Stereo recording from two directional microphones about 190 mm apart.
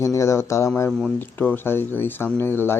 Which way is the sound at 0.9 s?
5° left (ahead or behind).